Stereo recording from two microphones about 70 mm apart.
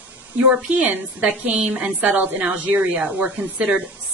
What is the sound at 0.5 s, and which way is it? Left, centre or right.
A woman's voice, centre.